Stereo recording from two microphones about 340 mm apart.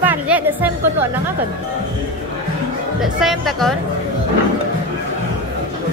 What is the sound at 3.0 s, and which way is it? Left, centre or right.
Speech, centre.